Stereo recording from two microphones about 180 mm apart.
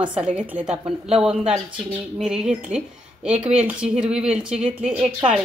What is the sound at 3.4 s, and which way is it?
Speech, 35° right (ahead or behind).